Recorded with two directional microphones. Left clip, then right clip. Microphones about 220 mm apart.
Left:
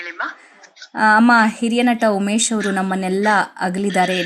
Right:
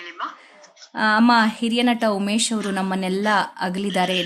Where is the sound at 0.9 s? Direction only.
15° left (ahead or behind).